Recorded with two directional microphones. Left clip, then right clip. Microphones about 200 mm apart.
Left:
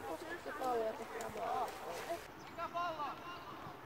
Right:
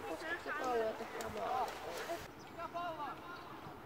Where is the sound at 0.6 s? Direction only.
45° right (ahead or behind).